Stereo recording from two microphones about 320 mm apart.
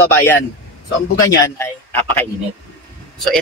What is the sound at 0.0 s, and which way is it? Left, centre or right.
Speech, centre.